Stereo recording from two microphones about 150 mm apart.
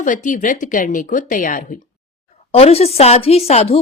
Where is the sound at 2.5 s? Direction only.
45° left (ahead or behind).